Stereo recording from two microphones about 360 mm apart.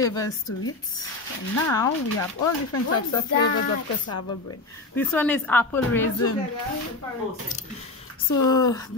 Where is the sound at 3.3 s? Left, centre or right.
Left.